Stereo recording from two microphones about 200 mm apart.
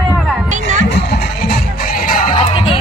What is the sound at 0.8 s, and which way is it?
Music, 55° left (ahead or behind).